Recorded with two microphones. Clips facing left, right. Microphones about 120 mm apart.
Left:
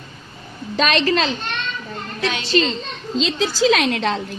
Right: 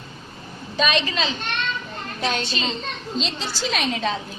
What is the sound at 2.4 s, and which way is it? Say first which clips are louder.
Speech: left 9 dB; 80° left.